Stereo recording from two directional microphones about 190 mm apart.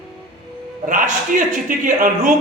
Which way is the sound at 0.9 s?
45° right (ahead or behind).